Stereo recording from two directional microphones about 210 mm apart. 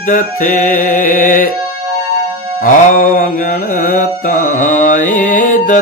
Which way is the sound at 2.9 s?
40° left (ahead or behind).